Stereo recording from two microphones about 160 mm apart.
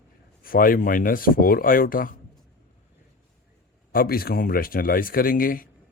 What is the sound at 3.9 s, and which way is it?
Speech, 70° left (ahead or behind).